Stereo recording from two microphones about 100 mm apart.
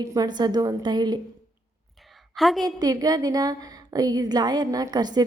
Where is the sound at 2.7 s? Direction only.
40° right (ahead or behind).